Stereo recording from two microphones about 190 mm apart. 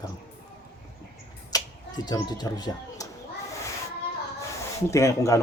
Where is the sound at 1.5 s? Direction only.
20° left (ahead or behind).